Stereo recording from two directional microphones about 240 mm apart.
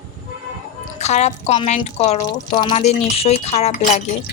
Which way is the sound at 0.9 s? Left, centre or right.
Left.